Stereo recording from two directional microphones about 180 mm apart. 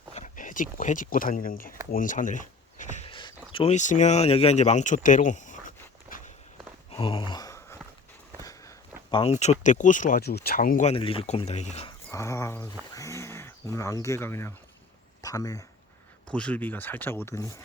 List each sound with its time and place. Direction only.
0.1 s speech: 45° left (ahead or behind)
3.1 s a sound: 25° left (ahead or behind); by 6.3 s 45° left (ahead or behind)
6.9 s a sound: 30° left (ahead or behind)
9.3 s speech: 40° left (ahead or behind)
10.9 s speech: 30° left (ahead or behind)
12.1 s speech: 15° left (ahead or behind)
16.3 s speech: 5° left (ahead or behind)